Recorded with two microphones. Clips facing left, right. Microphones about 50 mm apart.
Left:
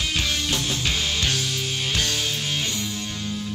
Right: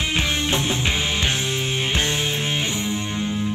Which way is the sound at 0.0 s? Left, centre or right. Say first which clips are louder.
Right 3 dB; right.